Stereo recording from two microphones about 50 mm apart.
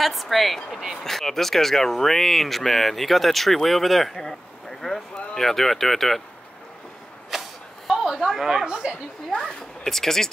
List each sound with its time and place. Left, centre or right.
0.0 s speech: centre
7.2 s a sound: centre
8.1 s speech: centre
8.5 s speech: centre
9.3 s speech: centre